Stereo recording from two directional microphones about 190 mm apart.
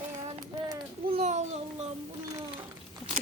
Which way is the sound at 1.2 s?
40° right (ahead or behind).